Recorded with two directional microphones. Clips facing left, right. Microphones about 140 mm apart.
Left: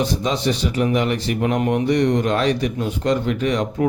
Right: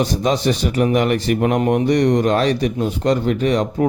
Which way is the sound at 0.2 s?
45° right (ahead or behind).